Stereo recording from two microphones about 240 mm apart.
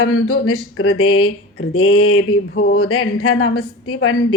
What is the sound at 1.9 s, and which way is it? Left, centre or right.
Speech, left.